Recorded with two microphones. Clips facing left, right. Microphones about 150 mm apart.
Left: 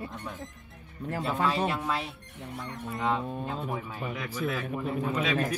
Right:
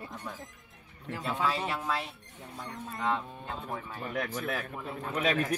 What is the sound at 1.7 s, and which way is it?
Speech, centre (ahead or behind).